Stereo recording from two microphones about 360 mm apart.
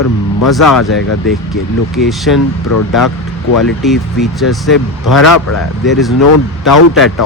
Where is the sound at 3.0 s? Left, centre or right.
Left.